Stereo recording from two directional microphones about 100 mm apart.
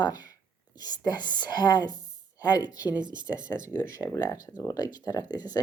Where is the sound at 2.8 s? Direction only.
15° right (ahead or behind).